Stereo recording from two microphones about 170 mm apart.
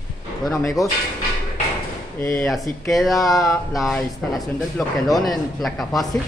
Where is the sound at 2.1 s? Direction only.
15° left (ahead or behind).